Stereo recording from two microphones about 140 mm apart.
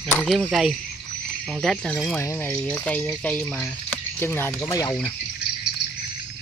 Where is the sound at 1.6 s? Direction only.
Centre (ahead or behind).